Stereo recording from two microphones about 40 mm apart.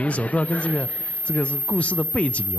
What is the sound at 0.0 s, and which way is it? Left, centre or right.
A man's voice, left.